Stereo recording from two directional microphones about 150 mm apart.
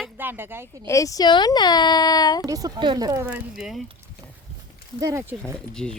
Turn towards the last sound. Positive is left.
turn(degrees=5)  # may be behind; listen again after turning